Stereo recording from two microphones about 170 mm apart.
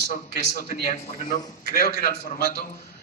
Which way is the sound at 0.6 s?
50° left (ahead or behind).